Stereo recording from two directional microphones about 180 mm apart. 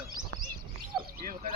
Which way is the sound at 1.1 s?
55° right (ahead or behind).